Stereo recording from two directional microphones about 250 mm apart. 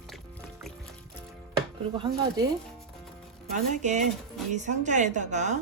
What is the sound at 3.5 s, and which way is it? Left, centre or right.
A woman's voice, right.